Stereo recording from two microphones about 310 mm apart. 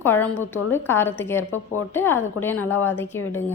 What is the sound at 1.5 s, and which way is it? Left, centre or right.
Speech, left.